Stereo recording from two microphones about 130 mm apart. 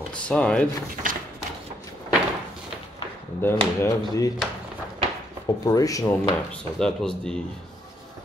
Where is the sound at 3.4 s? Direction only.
25° left (ahead or behind).